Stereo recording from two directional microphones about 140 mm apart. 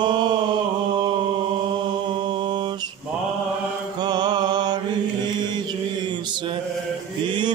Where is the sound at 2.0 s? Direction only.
35° right (ahead or behind).